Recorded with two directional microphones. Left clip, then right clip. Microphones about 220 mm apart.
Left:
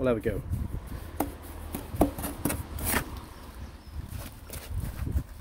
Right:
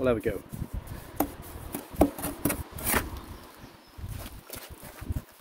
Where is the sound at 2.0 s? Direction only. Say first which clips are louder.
Right 2 dB; 30° right (ahead or behind).